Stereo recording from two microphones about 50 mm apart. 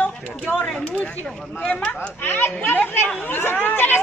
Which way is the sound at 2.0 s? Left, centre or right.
Left.